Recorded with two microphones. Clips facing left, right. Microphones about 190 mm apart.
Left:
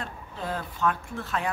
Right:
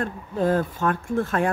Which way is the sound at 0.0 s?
50° right (ahead or behind).